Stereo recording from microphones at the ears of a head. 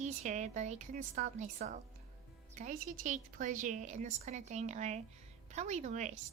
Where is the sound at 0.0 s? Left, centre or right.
Right.